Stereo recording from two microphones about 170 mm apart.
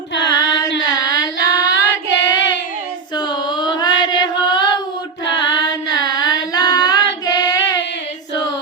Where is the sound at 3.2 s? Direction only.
25° left (ahead or behind).